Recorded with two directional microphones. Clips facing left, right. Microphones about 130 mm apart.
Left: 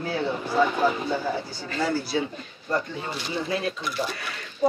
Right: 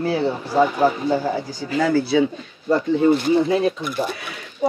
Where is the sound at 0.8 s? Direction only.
40° right (ahead or behind).